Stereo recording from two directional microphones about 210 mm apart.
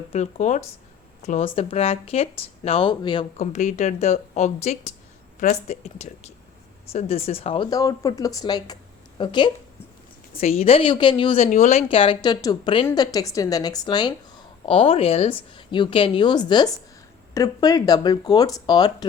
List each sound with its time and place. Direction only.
0.1 s speech: 35° left (ahead or behind)
3.4 s speech: 35° left (ahead or behind); by 19.0 s 20° left (ahead or behind)